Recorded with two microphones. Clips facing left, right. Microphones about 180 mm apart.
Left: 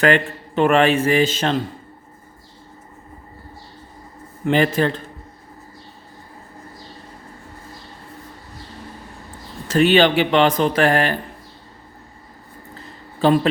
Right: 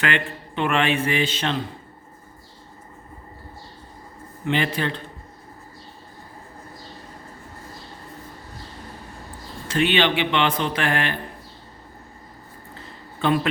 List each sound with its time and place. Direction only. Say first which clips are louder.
0.0 s a man's voice: left 8 dB; 40° left (ahead or behind)
4.4 s a man's voice: left 6 dB; 45° left (ahead or behind)
9.6 s a man's voice: left 6 dB; 40° left (ahead or behind)
13.2 s a man's voice: left 6 dB; 35° left (ahead or behind)